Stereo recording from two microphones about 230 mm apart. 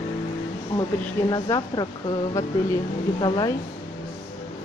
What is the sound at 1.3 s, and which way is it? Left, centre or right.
Speech, centre.